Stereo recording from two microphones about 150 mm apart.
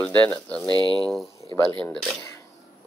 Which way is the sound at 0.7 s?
30° right (ahead or behind).